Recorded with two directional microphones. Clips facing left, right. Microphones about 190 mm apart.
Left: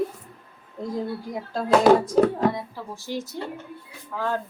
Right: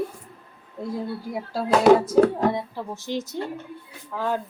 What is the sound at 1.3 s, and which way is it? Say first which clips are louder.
Speech: left 1 dB; 5° right (ahead or behind).